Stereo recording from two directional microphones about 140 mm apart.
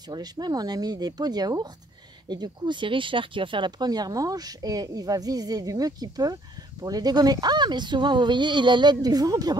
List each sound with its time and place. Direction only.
0.1 s speech: 30° right (ahead or behind)